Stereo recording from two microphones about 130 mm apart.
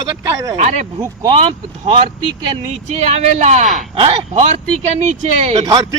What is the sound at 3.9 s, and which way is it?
Speech, 50° right (ahead or behind).